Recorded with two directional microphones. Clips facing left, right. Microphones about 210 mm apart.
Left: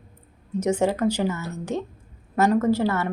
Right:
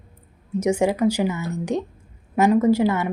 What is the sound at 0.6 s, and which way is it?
Speech, 10° right (ahead or behind).